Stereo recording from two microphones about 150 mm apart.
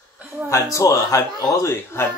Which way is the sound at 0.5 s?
20° left (ahead or behind).